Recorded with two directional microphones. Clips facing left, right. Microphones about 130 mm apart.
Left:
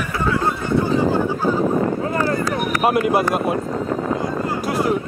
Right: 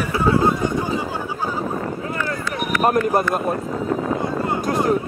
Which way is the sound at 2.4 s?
35° left (ahead or behind).